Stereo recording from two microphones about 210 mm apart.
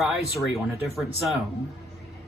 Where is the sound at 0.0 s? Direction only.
Centre (ahead or behind).